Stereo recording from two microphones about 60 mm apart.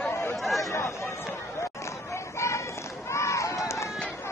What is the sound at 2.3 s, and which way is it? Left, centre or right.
Run, left.